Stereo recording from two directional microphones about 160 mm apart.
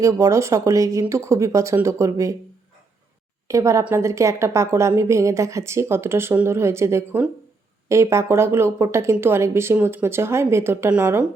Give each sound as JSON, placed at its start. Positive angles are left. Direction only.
{"t": 0.0, "sound": "speech", "side_deg": -20}
{"t": 3.5, "sound": "a woman's voice", "side_deg": -20}